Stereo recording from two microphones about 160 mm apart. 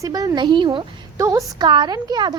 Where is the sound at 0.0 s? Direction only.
20° right (ahead or behind).